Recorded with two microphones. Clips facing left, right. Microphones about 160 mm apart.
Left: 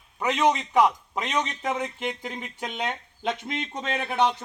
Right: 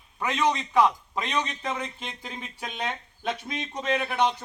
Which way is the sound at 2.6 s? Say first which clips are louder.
Left 2 dB; 20° left (ahead or behind).